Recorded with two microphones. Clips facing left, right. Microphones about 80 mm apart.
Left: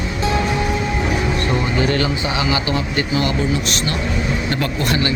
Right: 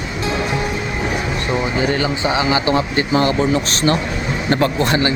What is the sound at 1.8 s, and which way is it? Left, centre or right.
Speech, centre.